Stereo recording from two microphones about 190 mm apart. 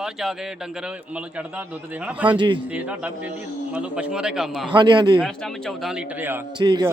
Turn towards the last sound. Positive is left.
turn(degrees=-20)  # may be behind; listen again after turning